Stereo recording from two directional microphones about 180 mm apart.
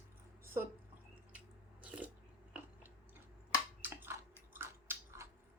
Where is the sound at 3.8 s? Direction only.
10° right (ahead or behind).